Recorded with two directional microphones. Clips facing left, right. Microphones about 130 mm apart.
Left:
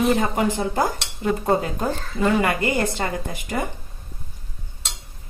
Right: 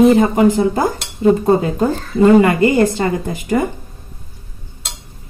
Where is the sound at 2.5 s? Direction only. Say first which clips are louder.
Right 9 dB; 25° right (ahead or behind).